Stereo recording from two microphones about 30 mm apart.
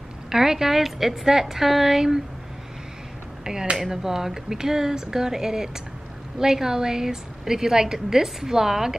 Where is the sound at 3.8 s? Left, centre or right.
Centre.